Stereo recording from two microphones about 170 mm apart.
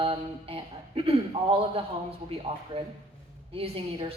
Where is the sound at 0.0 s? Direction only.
30° right (ahead or behind).